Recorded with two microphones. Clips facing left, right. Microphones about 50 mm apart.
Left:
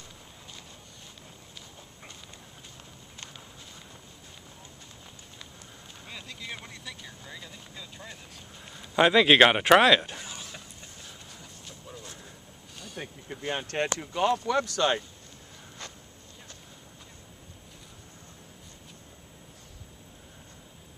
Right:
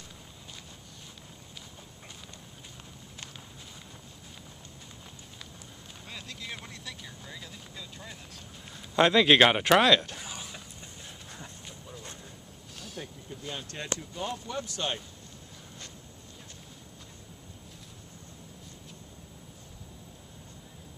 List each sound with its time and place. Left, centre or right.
6.0 s vehicle: centre
8.7 s speech: centre
10.2 s a sound: centre
12.7 s a sound: centre
13.3 s speech: left
13.9 s speech: left